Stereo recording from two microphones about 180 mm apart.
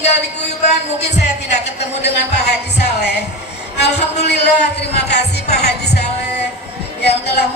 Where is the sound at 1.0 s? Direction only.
70° left (ahead or behind).